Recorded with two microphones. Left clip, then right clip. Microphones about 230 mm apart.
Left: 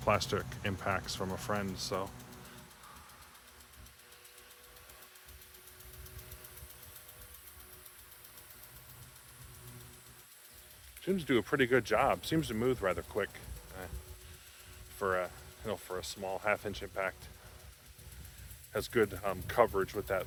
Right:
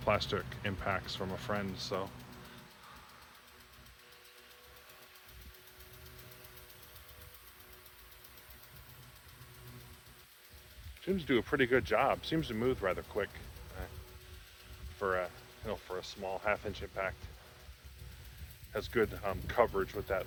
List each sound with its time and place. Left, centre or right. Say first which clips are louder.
0.0 s speech: left 1 dB; centre
11.0 s speech: left 1 dB; left
14.9 s speech: left 1 dB; left
18.7 s speech: left 2 dB; left